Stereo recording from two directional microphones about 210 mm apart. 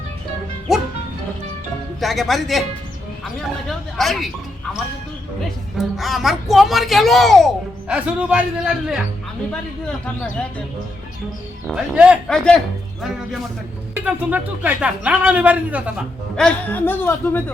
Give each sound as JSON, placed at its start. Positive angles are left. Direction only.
{"t": 2.0, "sound": "speech", "side_deg": 0}
{"t": 5.7, "sound": "speech", "side_deg": 0}
{"t": 11.7, "sound": "speech", "side_deg": -5}
{"t": 16.4, "sound": "speech", "side_deg": 5}